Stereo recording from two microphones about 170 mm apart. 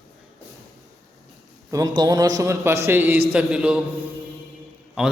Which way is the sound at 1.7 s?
20° right (ahead or behind).